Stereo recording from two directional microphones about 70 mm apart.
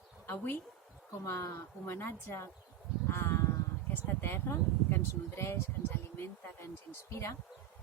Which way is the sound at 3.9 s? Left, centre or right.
Left.